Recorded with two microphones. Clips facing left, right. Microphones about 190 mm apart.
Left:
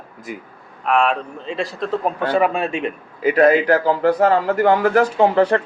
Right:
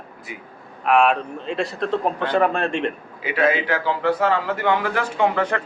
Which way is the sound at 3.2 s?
40° left (ahead or behind).